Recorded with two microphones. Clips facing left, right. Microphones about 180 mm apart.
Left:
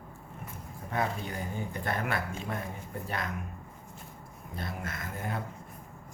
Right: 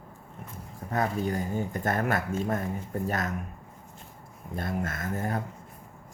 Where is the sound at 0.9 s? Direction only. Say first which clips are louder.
Right 5 dB; 40° right (ahead or behind).